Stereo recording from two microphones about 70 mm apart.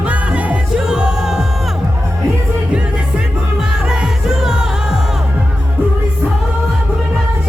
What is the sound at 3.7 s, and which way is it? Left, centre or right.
Music, centre.